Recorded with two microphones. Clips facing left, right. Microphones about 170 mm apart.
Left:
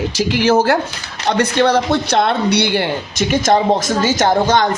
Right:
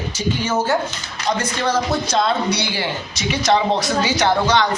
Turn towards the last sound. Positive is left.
turn(degrees=45)  # may be behind; listen again after turning